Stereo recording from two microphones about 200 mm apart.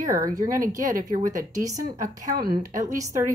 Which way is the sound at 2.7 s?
15° right (ahead or behind).